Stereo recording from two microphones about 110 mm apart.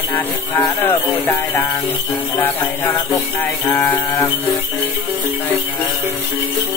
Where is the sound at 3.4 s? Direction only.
20° left (ahead or behind).